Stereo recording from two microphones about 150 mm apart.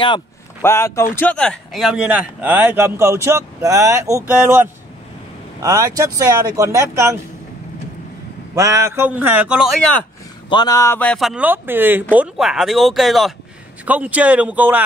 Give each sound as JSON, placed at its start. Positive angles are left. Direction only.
{"t": 0.6, "sound": "speech", "side_deg": 15}
{"t": 8.5, "sound": "speech", "side_deg": -20}
{"t": 10.5, "sound": "speech", "side_deg": 25}
{"t": 11.0, "sound": "speech", "side_deg": 5}